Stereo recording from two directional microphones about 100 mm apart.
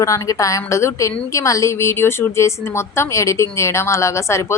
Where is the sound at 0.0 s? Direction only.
35° left (ahead or behind).